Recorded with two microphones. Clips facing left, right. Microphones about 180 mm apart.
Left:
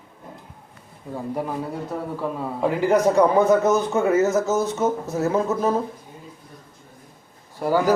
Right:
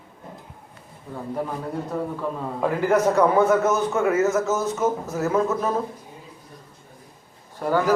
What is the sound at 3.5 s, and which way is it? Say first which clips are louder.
A man's voice: left 2 dB; 35° left (ahead or behind).